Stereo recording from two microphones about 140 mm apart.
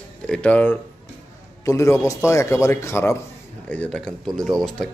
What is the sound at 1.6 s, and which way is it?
A man's voice, 20° left (ahead or behind).